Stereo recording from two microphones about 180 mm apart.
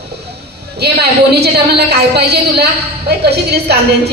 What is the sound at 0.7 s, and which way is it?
A woman's voice, 65° right (ahead or behind).